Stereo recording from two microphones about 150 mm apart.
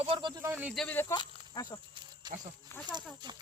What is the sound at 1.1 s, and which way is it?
Speech, 25° left (ahead or behind).